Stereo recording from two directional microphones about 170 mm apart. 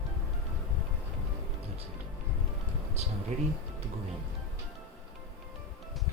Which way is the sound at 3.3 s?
40° right (ahead or behind).